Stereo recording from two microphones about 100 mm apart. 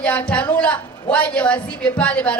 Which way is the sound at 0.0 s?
15° left (ahead or behind).